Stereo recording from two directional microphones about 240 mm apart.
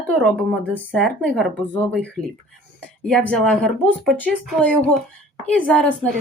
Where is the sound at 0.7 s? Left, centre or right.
Centre.